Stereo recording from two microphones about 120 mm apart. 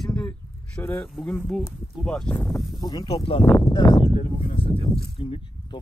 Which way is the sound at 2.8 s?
35° left (ahead or behind).